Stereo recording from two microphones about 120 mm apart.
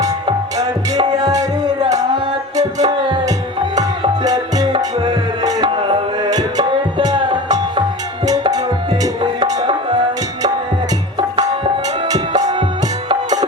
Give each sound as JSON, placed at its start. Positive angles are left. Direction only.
{"t": 0.5, "sound": "music", "side_deg": -35}
{"t": 4.8, "sound": "music", "side_deg": -40}
{"t": 8.9, "sound": "music", "side_deg": -45}
{"t": 11.2, "sound": "tabla", "side_deg": -45}
{"t": 12.3, "sound": "music", "side_deg": -70}